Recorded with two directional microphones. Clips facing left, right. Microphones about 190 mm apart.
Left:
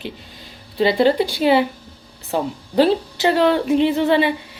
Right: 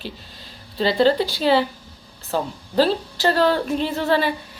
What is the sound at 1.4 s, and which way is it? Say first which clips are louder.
A woman's voice: left 3 dB; 15° left (ahead or behind).